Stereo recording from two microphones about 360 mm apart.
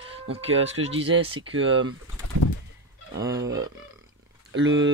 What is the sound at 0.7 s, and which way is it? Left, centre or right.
Speech, centre.